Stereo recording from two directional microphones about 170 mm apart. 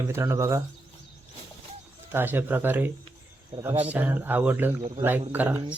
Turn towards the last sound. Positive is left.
turn(degrees=-10)  # may be behind; listen again after turning